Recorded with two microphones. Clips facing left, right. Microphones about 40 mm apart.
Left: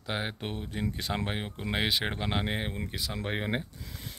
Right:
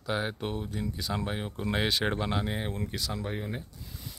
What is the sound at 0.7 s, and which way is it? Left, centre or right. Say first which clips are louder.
Speech: left 1 dB; left.